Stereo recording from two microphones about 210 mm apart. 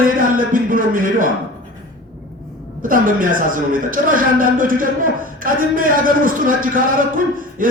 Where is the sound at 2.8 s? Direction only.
40° right (ahead or behind).